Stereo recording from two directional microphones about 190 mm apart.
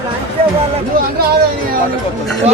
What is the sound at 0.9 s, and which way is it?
Speech, 50° right (ahead or behind).